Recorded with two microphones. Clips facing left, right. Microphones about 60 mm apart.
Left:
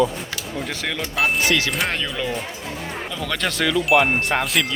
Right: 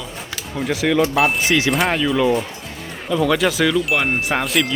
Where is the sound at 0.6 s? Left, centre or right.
Centre.